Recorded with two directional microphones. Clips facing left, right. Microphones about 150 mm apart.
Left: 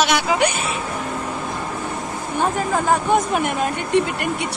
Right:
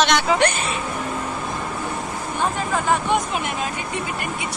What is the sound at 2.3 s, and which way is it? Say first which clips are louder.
Speech: left 3 dB; 40° left (ahead or behind).